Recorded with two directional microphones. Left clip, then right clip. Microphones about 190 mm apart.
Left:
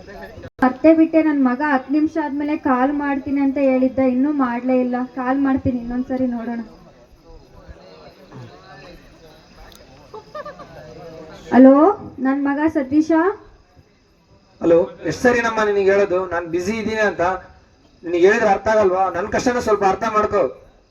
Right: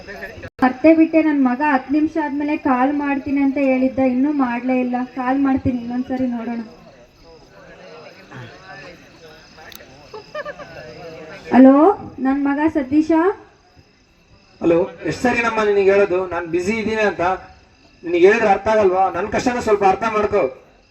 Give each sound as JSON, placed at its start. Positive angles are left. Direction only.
{"t": 0.1, "sound": "a woman's voice", "side_deg": -40}
{"t": 0.6, "sound": "a woman's voice", "side_deg": -5}
{"t": 10.3, "sound": "a sound", "side_deg": -40}
{"t": 11.4, "sound": "a woman's voice", "side_deg": -5}
{"t": 14.6, "sound": "a woman's voice", "side_deg": 0}